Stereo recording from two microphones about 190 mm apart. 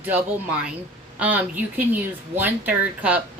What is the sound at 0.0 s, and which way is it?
Speech, 5° right (ahead or behind).